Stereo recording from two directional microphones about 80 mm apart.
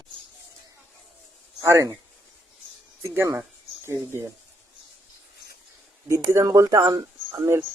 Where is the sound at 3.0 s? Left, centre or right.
Right.